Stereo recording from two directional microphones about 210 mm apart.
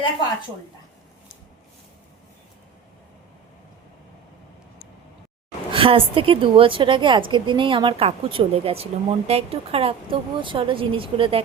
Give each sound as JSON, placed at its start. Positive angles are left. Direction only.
{"t": 5.7, "sound": "a woman's voice", "side_deg": -25}